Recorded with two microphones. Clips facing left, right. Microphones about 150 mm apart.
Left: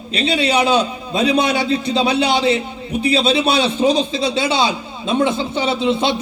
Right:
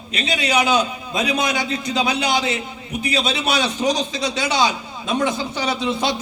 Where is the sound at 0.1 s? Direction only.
30° left (ahead or behind).